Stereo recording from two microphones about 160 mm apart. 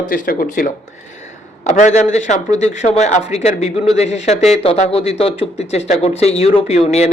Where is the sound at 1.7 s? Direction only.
50° left (ahead or behind).